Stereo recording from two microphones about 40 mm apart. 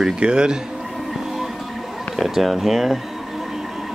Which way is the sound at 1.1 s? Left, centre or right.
Centre.